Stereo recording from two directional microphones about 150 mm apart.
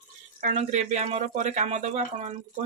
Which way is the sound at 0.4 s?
55° right (ahead or behind).